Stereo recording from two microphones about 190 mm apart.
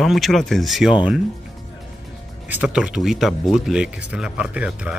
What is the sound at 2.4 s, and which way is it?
Speech, 10° right (ahead or behind).